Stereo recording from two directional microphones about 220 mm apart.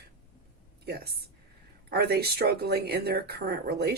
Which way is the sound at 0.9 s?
45° right (ahead or behind).